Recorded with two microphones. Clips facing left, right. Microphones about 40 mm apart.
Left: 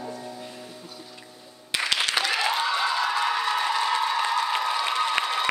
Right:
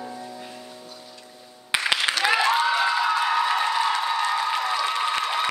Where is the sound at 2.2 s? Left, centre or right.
Centre.